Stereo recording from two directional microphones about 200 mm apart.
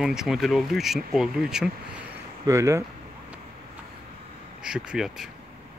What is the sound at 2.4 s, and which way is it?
Speech, 15° right (ahead or behind).